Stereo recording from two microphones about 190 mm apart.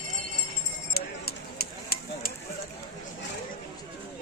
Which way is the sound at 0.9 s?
55° left (ahead or behind).